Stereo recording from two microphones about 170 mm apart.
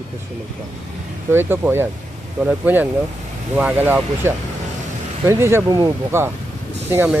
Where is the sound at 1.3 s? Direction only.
15° right (ahead or behind).